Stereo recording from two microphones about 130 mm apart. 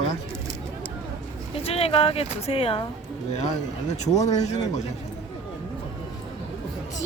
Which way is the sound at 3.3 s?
60° left (ahead or behind).